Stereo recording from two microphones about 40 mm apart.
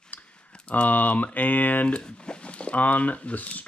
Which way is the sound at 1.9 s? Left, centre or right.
Left.